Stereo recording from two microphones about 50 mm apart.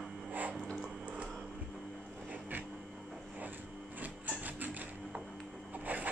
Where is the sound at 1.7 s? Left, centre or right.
Centre.